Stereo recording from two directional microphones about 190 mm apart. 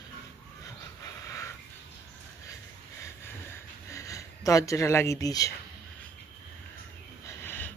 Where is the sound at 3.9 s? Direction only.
15° left (ahead or behind).